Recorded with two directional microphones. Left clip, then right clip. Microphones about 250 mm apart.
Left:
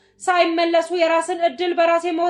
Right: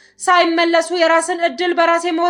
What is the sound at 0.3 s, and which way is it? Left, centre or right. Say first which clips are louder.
A woman's voice: right 4 dB; right.